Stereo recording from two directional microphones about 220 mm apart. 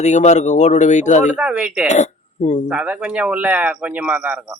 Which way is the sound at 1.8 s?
30° left (ahead or behind).